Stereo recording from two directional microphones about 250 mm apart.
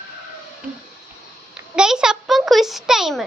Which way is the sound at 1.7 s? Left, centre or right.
Centre.